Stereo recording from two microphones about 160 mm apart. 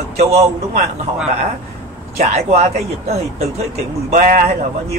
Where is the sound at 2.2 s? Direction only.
40° right (ahead or behind).